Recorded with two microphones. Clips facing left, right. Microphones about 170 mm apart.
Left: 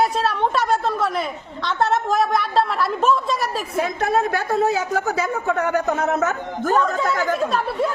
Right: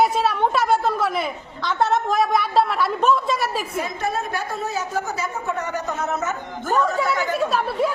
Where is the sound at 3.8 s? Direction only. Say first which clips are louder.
Left 5 dB; 60° left (ahead or behind).